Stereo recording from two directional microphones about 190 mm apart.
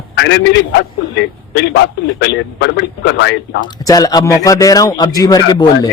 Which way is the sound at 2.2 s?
65° left (ahead or behind).